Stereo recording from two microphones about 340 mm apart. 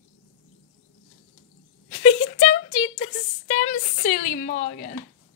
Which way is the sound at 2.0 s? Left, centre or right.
Centre.